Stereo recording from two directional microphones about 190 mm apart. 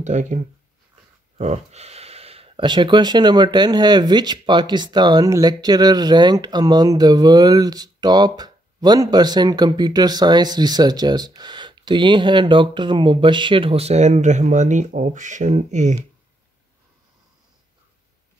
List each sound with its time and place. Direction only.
0.0 s speech: 40° right (ahead or behind)
1.4 s speech: 35° right (ahead or behind)